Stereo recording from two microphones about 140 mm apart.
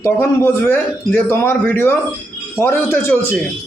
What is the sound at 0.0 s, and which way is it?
A man's voice, 15° left (ahead or behind).